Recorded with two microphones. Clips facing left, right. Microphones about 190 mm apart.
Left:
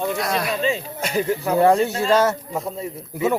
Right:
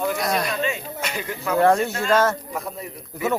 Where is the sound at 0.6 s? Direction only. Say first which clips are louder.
Left 3 dB; 30° left (ahead or behind).